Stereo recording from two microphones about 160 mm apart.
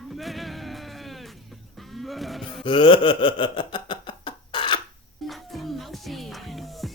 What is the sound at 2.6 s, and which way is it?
Wail, 30° left (ahead or behind).